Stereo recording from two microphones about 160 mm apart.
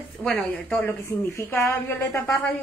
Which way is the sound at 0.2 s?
5° left (ahead or behind).